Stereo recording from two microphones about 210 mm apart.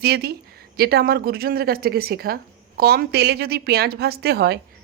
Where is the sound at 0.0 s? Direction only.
50° right (ahead or behind).